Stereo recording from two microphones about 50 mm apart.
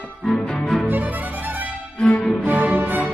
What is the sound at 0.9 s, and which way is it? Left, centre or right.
Music, right.